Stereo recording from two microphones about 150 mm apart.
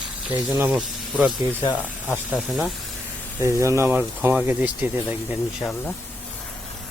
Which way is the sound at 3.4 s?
20° right (ahead or behind).